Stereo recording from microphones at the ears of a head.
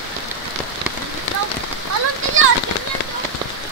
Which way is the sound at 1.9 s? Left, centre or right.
Right.